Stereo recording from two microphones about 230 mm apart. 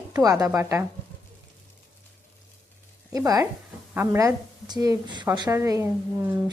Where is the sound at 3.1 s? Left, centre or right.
Centre.